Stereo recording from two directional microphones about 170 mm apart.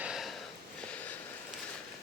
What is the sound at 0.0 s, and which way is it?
Sniff, 5° right (ahead or behind).